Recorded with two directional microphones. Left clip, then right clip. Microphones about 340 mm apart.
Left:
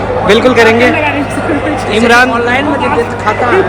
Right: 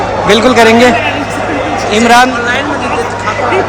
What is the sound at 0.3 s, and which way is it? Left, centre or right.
Speech, centre.